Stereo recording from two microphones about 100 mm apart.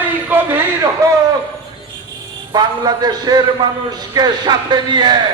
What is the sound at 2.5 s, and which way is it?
A man's voice, 45° right (ahead or behind).